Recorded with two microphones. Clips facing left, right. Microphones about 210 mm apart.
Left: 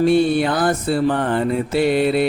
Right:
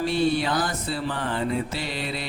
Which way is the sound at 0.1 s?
55° left (ahead or behind).